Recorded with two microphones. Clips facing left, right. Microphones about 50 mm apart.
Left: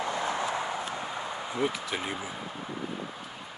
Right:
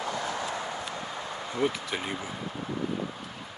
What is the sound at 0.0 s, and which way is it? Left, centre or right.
Clip-clop, left.